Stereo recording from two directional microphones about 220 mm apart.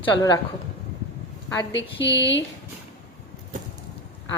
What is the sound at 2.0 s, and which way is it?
Speech, 55° left (ahead or behind).